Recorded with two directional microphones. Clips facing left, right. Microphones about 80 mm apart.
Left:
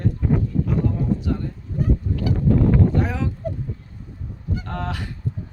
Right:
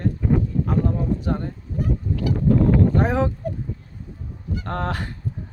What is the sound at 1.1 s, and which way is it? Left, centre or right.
Speech, right.